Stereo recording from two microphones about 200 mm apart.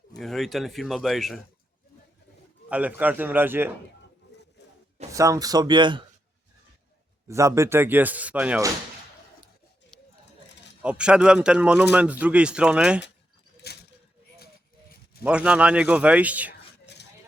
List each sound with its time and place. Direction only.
0.2 s speech: centre (ahead or behind)
2.6 s speech: 5° right (ahead or behind)
5.1 s speech: 15° right (ahead or behind)
7.3 s speech: 15° right (ahead or behind)
10.8 s speech: 5° right (ahead or behind)
13.6 s a sound: 55° left (ahead or behind)
15.2 s speech: 5° right (ahead or behind)